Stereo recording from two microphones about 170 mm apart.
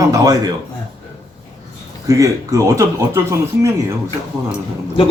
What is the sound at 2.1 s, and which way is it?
Speech, 20° right (ahead or behind).